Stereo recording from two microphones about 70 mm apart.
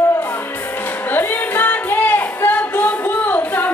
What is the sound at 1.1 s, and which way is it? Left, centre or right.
Music, left.